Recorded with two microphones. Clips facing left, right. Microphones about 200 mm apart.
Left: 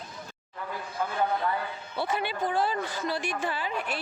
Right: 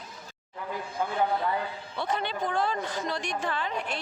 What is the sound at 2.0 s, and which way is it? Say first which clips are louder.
A woman's voice: left 1 dB; 5° left (ahead or behind).